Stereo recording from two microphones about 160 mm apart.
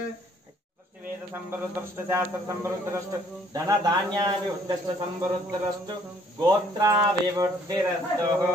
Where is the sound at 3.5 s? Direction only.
20° right (ahead or behind).